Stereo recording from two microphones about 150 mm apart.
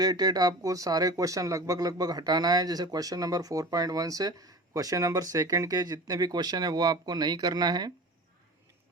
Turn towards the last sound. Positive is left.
turn(degrees=-25)  # may be behind; listen again after turning